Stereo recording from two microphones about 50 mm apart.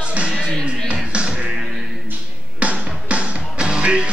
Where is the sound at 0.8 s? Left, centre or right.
Right.